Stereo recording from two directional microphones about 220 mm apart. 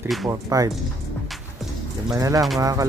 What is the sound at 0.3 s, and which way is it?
Speech, 15° right (ahead or behind).